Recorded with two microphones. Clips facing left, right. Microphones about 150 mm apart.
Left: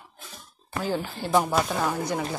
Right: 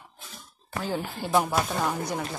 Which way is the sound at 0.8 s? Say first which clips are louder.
Left 2 dB; centre (ahead or behind).